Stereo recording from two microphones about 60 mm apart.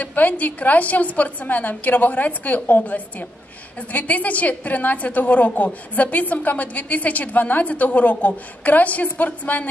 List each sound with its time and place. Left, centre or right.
0.0 s a woman's voice: left